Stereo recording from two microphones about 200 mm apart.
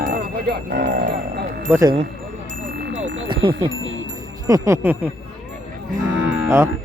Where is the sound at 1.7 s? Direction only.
15° right (ahead or behind).